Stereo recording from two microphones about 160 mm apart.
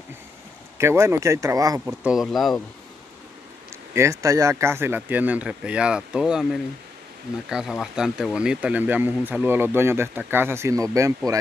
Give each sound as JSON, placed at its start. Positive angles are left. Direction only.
{"t": 0.7, "sound": "speech", "side_deg": -15}
{"t": 2.0, "sound": "speech", "side_deg": 0}
{"t": 3.9, "sound": "speech", "side_deg": -20}